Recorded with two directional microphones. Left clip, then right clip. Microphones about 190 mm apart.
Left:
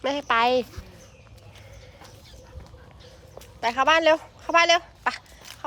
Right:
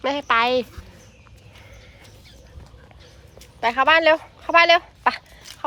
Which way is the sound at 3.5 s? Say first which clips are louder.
Right 4 dB; 5° left (ahead or behind).